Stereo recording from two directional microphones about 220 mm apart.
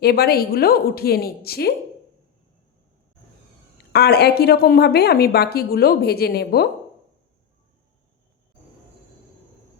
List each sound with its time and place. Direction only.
0.0 s a woman's voice: 45° left (ahead or behind)
3.9 s a woman's voice: 45° left (ahead or behind)